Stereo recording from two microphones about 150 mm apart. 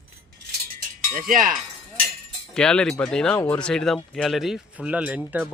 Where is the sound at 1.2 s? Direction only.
65° right (ahead or behind).